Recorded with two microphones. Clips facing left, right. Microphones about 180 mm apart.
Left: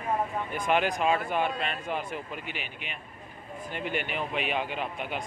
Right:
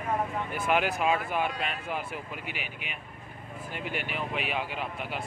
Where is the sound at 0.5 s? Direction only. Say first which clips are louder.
Left 1 dB; 5° right (ahead or behind).